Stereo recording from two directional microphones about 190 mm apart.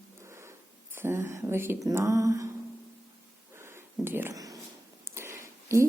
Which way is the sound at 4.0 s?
10° right (ahead or behind).